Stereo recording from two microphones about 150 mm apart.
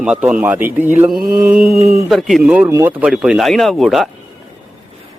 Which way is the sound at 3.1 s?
5° right (ahead or behind).